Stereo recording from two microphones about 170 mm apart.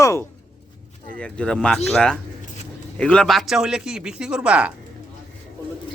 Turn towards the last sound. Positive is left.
turn(degrees=-5)  # may be behind; listen again after turning